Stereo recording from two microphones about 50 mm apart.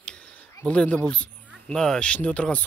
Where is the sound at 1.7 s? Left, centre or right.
Centre.